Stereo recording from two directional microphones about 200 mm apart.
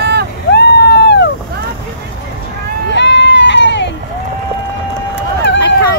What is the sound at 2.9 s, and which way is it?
Music, 60° left (ahead or behind).